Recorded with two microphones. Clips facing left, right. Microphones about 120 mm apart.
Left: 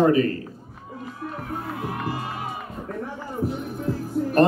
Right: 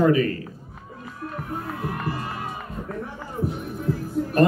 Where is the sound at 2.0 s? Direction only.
15° left (ahead or behind).